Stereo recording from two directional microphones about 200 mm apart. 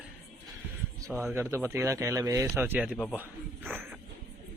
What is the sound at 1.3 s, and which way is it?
Speech, 10° right (ahead or behind).